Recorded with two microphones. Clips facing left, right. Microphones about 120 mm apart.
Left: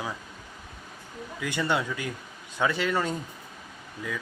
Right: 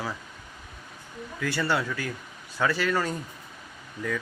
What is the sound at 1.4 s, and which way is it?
Speech, 20° left (ahead or behind).